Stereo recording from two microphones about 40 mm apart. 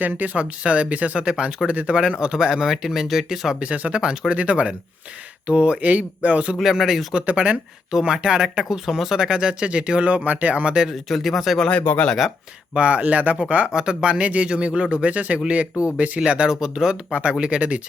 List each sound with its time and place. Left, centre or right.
0.3 s speech: right
1.2 s speech: right
3.6 s speech: right
6.6 s speech: centre
7.3 s speech: right
7.9 s speech: centre
9.2 s speech: centre
10.8 s speech: centre
11.9 s speech: left
12.7 s speech: right
16.2 s speech: right